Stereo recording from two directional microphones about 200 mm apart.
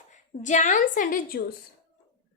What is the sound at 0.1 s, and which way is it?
A woman's voice, 35° left (ahead or behind).